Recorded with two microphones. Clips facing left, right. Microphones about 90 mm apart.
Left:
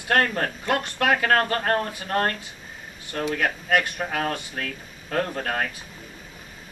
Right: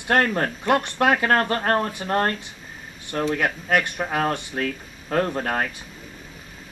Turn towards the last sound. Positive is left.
turn(degrees=-25)  # may be behind; listen again after turning